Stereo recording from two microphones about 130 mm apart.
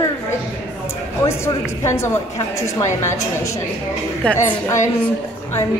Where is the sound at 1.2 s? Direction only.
20° left (ahead or behind).